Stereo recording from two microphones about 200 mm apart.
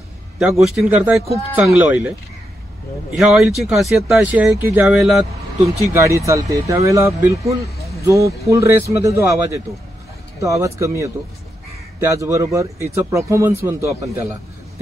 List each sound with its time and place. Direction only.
0.4 s speech: centre (ahead or behind)
3.2 s speech: centre (ahead or behind)
5.9 s speech: 15° right (ahead or behind)